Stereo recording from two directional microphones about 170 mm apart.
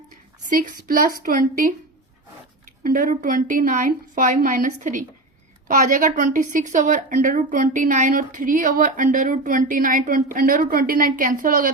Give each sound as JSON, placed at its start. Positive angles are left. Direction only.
{"t": 0.5, "sound": "a woman's voice", "side_deg": -55}
{"t": 2.8, "sound": "a woman's voice", "side_deg": -55}